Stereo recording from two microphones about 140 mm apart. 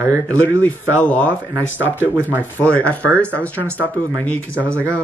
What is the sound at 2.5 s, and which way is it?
Speech, 10° left (ahead or behind).